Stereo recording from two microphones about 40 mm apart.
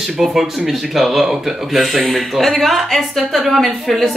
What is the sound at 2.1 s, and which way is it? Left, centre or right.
Speech, centre.